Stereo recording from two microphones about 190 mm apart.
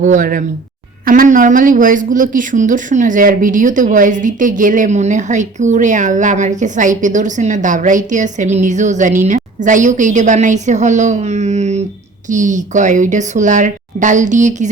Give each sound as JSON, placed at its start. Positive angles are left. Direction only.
{"t": 0.0, "sound": "speech", "side_deg": -45}